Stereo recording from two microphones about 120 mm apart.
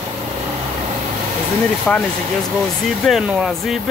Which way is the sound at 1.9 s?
10° left (ahead or behind).